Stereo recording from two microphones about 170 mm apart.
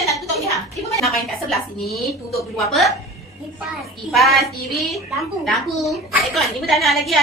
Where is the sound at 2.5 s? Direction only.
Centre (ahead or behind).